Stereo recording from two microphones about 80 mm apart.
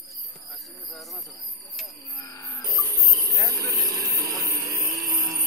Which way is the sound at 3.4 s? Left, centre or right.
Right.